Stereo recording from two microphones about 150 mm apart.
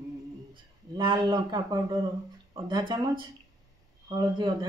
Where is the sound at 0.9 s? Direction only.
25° right (ahead or behind).